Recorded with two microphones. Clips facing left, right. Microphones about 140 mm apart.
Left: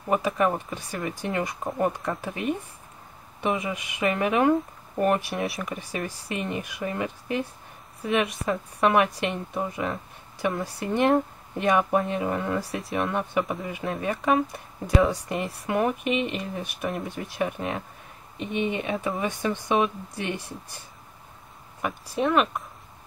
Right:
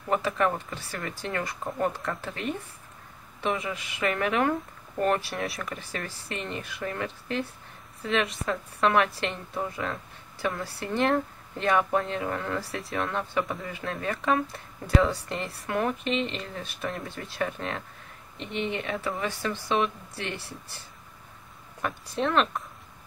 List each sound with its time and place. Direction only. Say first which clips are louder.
0.1 s speech: left 2 dB; 15° left (ahead or behind)
21.8 s speech: left 3 dB; 10° left (ahead or behind)